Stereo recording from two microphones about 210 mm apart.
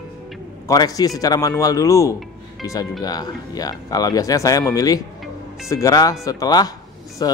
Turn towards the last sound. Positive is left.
turn(degrees=20)  # may be behind; listen again after turning